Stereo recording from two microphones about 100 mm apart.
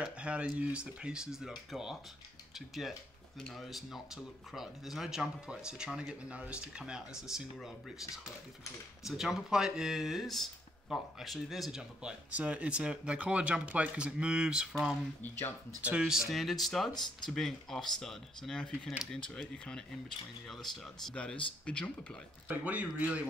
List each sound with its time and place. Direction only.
0.0 s speech: 10° right (ahead or behind)
9.0 s speech: 5° right (ahead or behind)
15.2 s speech: 20° left (ahead or behind)
15.8 s speech: 10° right (ahead or behind); by 19.4 s 10° left (ahead or behind)
20.4 s speech: centre (ahead or behind)
22.7 s speech: 15° right (ahead or behind)